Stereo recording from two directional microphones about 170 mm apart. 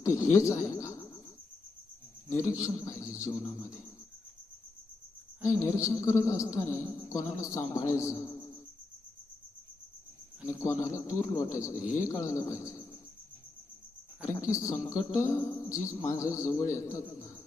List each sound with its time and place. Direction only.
0.0 s a sound: 15° left (ahead or behind)
2.3 s a man's voice: 15° left (ahead or behind)
5.5 s a man's voice: 20° left (ahead or behind)
10.4 s a man's voice: 15° left (ahead or behind)
14.3 s a man's voice: 15° left (ahead or behind)